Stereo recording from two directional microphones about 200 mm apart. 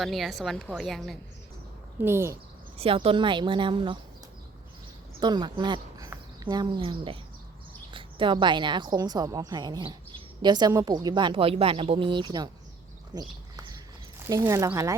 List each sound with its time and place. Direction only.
0.0 s a woman's voice: centre (ahead or behind)
2.0 s speech: 10° right (ahead or behind)
2.7 s a woman's voice: 30° right (ahead or behind)
5.2 s a woman's voice: 20° right (ahead or behind)
13.1 s a sound: 20° right (ahead or behind)
14.3 s speech: 15° right (ahead or behind)